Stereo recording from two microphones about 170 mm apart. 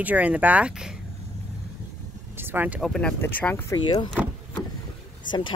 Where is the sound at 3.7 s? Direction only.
25° left (ahead or behind).